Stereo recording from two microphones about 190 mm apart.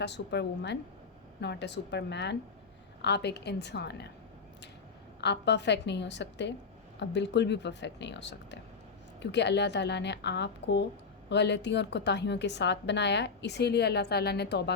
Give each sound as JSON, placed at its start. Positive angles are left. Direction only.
{"t": 0.0, "sound": "a woman's voice", "side_deg": 65}
{"t": 5.2, "sound": "a woman's voice", "side_deg": 65}